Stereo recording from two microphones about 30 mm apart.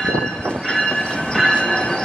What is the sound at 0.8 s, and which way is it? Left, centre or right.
Train, left.